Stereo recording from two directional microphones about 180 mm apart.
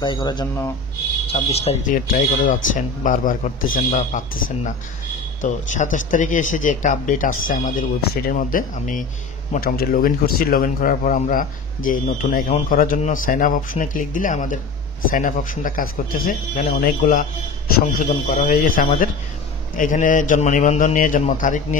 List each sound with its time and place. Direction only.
0.0 s speech: 25° left (ahead or behind); by 21.5 s 45° left (ahead or behind)